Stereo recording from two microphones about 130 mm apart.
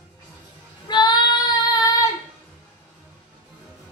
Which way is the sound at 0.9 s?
35° left (ahead or behind).